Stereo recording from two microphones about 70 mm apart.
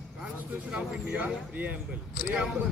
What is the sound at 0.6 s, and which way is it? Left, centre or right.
Speech, centre.